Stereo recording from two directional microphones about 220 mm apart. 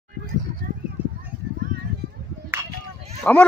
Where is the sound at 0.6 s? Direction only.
45° right (ahead or behind).